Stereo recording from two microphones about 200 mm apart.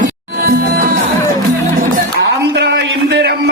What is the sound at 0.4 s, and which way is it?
Music, 50° right (ahead or behind).